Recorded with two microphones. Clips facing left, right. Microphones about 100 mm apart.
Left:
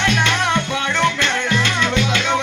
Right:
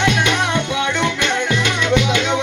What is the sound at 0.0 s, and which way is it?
Music, 15° right (ahead or behind).